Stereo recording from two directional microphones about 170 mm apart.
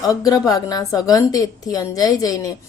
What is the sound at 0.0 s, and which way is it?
A woman's voice, 20° left (ahead or behind).